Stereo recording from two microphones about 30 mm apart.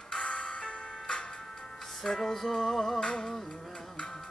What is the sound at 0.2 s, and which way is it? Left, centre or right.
Music, left.